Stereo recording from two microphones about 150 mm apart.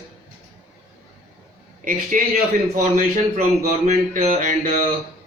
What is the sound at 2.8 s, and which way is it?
Speech, 60° right (ahead or behind).